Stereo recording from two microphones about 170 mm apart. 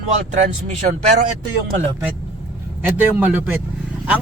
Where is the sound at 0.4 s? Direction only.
45° right (ahead or behind).